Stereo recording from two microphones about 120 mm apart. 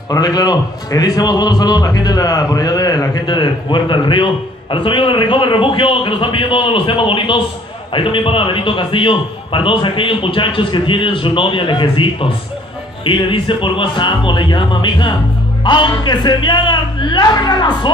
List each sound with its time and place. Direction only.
0.1 s a man's voice: 35° left (ahead or behind)